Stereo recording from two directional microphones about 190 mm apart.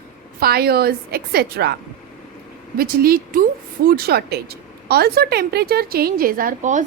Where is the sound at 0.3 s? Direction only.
55° right (ahead or behind).